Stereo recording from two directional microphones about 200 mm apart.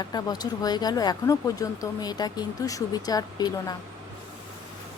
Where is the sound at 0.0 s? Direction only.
20° left (ahead or behind).